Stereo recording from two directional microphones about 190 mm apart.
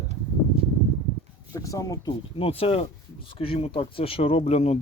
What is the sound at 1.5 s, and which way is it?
Speech, 15° left (ahead or behind).